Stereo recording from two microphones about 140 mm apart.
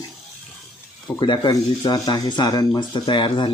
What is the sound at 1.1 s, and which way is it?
Speech, 30° left (ahead or behind).